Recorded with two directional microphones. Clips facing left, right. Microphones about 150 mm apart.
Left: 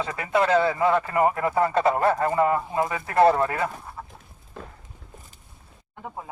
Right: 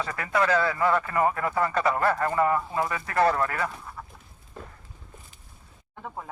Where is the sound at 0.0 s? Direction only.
20° left (ahead or behind).